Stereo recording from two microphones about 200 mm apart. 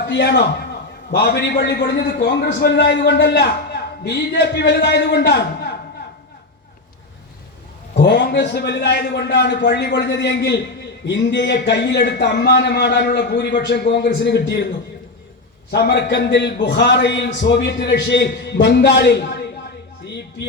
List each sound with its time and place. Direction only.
0.0 s a man's voice: 55° left (ahead or behind)
7.9 s a man's voice: 55° left (ahead or behind)
15.7 s a man's voice: 55° left (ahead or behind)